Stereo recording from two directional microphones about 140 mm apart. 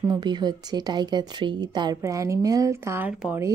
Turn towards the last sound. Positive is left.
turn(degrees=-5)  # may be behind; listen again after turning